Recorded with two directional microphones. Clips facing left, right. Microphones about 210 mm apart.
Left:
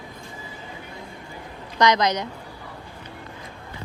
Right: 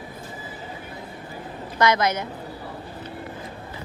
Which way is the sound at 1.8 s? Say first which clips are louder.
Left 1 dB; 15° left (ahead or behind).